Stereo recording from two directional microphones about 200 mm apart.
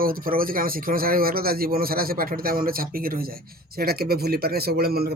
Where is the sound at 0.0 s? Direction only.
45° right (ahead or behind).